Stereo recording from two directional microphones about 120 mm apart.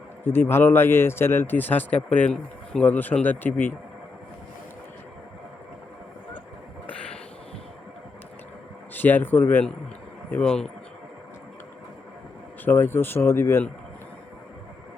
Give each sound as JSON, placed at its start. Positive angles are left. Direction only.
{"t": 0.3, "sound": "speech", "side_deg": 20}
{"t": 8.9, "sound": "speech", "side_deg": 15}
{"t": 12.6, "sound": "speech", "side_deg": 20}